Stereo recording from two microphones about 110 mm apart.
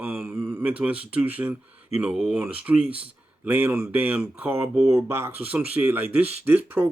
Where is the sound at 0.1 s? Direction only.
10° right (ahead or behind).